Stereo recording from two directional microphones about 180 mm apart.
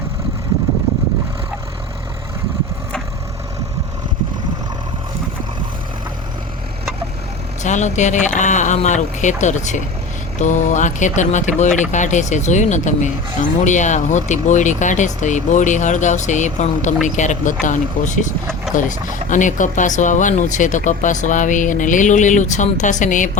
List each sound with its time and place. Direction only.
7.6 s speech: 40° left (ahead or behind)